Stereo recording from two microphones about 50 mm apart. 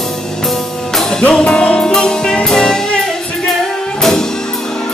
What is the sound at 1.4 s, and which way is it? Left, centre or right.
Music, left.